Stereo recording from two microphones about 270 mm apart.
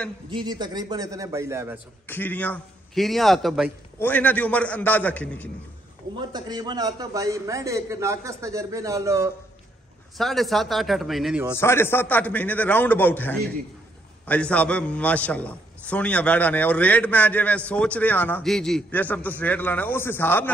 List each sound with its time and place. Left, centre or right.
0.3 s a man's voice: centre
2.0 s a man's voice: centre
6.1 s a man's voice: centre
10.1 s a man's voice: centre
11.5 s a man's voice: centre